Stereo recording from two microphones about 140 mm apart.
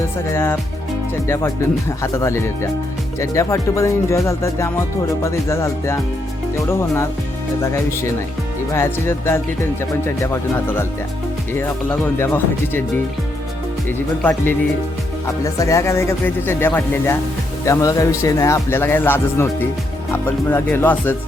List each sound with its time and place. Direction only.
0.3 s speech: 15° left (ahead or behind)
14.2 s speech: 15° left (ahead or behind)